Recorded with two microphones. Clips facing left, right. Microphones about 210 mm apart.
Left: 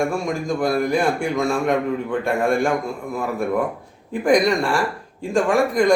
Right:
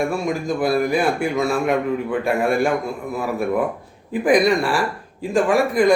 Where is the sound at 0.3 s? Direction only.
5° right (ahead or behind).